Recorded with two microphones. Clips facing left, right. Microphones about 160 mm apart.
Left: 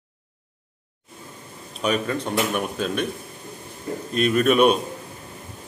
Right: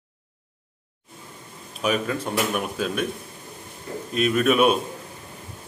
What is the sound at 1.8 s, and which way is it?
Speech, 5° right (ahead or behind).